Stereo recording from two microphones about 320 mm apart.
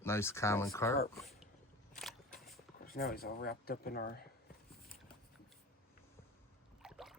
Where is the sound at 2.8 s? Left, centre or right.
Left.